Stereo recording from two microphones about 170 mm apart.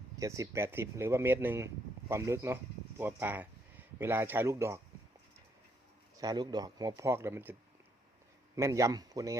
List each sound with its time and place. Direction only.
0.2 s speech: 15° right (ahead or behind)
6.1 s speech: 25° right (ahead or behind)
8.5 s speech: 20° right (ahead or behind)